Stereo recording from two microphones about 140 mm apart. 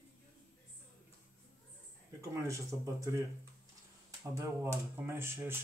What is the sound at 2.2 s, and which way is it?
Speech, 20° right (ahead or behind).